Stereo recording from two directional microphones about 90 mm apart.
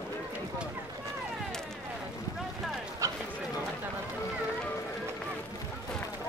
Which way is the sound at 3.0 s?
35° right (ahead or behind).